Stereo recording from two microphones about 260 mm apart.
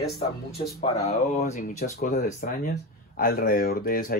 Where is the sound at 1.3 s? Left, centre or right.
Left.